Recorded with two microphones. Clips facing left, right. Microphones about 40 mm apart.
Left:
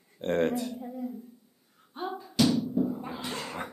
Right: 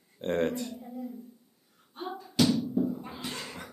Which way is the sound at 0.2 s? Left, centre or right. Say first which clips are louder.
Left 2 dB; centre.